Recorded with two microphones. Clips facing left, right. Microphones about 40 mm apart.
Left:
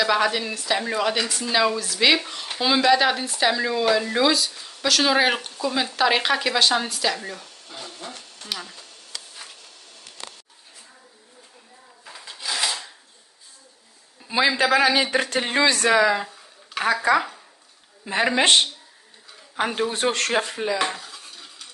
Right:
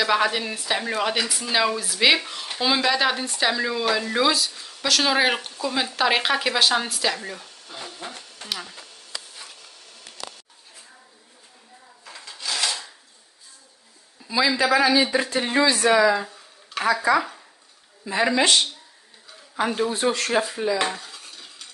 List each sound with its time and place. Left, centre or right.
0.0 s speech: centre
12.3 s filing: centre
14.2 s a sound: left
14.6 s speech: left
16.0 s a woman's voice: left
18.0 s a woman's voice: left
19.9 s speech: left
20.7 s stir: centre